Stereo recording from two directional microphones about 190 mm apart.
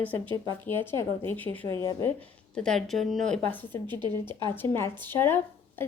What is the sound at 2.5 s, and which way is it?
A woman's voice, 5° left (ahead or behind).